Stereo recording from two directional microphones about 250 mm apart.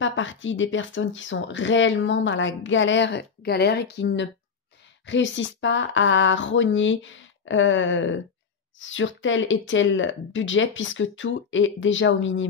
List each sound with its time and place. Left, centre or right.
0.0 s speech: left